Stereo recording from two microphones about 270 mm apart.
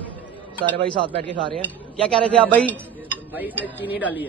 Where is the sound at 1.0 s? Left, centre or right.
Right.